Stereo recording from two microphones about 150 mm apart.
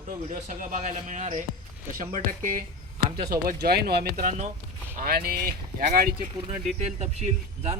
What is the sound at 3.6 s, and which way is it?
Speech, 90° right.